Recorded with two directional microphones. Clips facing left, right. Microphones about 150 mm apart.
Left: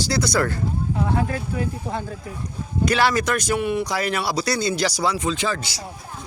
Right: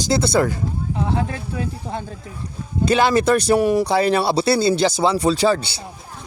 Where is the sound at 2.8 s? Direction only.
25° right (ahead or behind).